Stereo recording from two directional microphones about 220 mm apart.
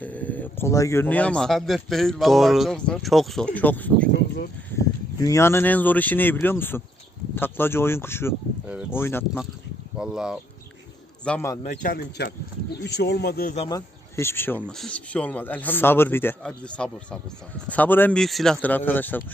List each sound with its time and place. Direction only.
0.0 s speech: 5° left (ahead or behind)
10.0 s speech: 5° right (ahead or behind)
11.3 s speech: 10° left (ahead or behind)
11.6 s a man's voice: 35° left (ahead or behind)
13.7 s speech: 15° left (ahead or behind)